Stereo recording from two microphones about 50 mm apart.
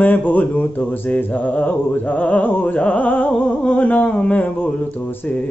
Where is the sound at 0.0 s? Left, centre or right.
Left.